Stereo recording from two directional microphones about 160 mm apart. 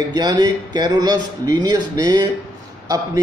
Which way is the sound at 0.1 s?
25° right (ahead or behind).